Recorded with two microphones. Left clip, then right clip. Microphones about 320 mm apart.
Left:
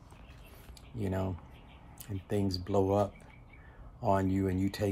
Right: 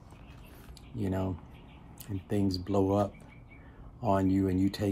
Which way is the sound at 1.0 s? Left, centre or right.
Centre.